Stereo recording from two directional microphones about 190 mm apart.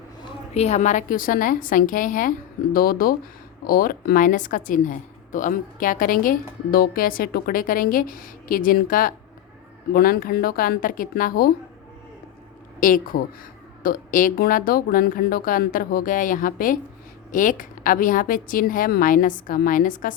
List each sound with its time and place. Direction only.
0.5 s a woman's voice: 35° left (ahead or behind)
12.8 s a woman's voice: 45° left (ahead or behind)